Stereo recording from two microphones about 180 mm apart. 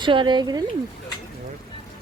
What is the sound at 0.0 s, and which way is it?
Speech, 25° right (ahead or behind).